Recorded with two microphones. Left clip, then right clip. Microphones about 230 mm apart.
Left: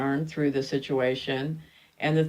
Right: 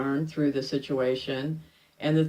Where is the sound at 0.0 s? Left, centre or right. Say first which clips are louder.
Even; left.